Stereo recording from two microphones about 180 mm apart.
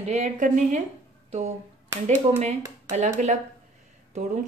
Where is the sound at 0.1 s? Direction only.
40° right (ahead or behind).